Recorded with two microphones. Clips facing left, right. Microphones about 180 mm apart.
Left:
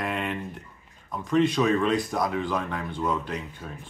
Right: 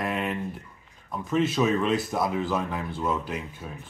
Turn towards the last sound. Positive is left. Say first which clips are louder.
# even
turn(degrees=-5)  # may be behind; listen again after turning